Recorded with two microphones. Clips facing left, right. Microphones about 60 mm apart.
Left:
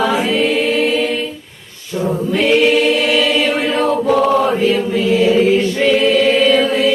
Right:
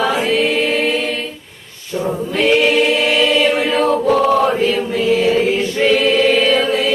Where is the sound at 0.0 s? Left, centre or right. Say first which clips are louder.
Left 1 dB; centre.